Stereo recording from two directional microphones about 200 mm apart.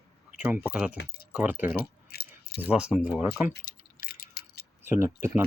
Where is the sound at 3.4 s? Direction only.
45° left (ahead or behind).